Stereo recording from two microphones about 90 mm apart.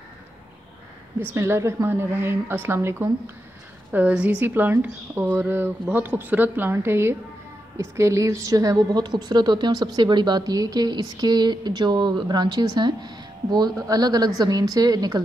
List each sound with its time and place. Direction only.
1.2 s speech: 30° right (ahead or behind)
3.9 s a woman's voice: 15° right (ahead or behind); by 15.2 s 45° right (ahead or behind)